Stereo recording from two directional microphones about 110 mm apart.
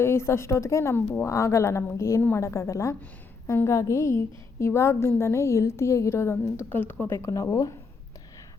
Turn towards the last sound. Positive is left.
turn(degrees=30)  # may be behind; listen again after turning